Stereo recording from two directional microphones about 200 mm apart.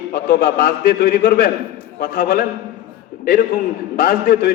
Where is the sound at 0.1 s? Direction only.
50° left (ahead or behind).